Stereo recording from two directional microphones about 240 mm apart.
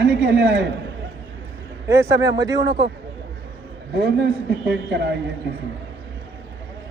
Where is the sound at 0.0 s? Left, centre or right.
Right.